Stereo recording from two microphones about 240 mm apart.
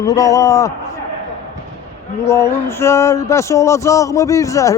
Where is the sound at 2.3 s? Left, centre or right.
Centre.